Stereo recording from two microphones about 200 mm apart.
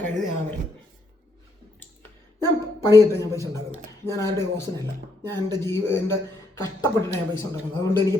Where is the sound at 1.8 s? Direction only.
10° left (ahead or behind).